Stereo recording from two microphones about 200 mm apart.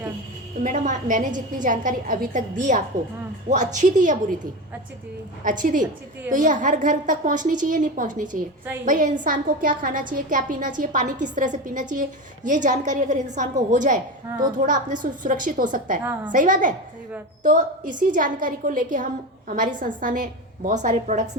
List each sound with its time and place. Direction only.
0.6 s a woman's voice: 40° right (ahead or behind)
5.4 s a woman's voice: 40° right (ahead or behind)
15.0 s a woman's voice: 40° right (ahead or behind)